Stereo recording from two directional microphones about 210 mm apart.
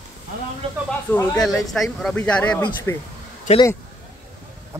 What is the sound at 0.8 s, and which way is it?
Speech, 5° left (ahead or behind).